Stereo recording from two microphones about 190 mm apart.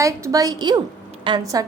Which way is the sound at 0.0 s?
15° right (ahead or behind).